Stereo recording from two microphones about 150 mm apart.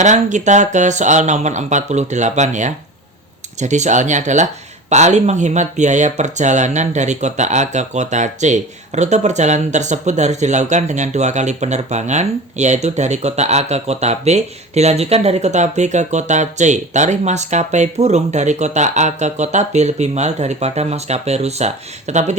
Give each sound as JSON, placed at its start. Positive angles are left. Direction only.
{"t": 0.0, "sound": "speech", "side_deg": -55}